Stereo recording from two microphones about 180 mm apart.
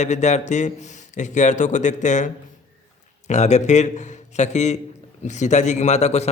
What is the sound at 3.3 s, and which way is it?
A man's voice, 40° left (ahead or behind).